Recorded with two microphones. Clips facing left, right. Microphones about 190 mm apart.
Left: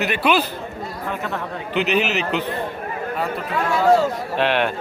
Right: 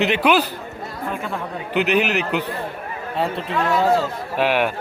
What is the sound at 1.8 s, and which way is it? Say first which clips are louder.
Speech: right 1 dB; 60° right (ahead or behind).